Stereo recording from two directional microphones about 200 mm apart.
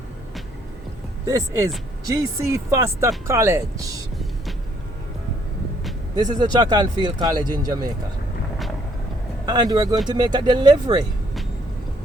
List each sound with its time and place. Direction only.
1.3 s speech: 15° right (ahead or behind)
6.4 s speech: 20° right (ahead or behind)
9.5 s speech: 20° right (ahead or behind)